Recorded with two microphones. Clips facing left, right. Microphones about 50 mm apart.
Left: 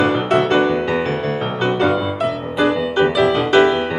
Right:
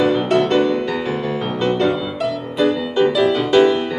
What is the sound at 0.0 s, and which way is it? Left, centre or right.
Music, left.